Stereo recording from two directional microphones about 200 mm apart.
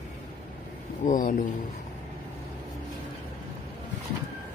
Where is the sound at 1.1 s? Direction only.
45° left (ahead or behind).